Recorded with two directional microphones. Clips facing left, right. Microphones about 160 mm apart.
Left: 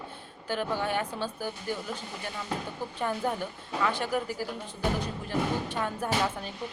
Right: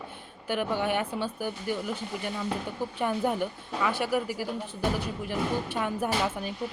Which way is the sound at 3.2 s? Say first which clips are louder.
Right 3 dB; 15° right (ahead or behind).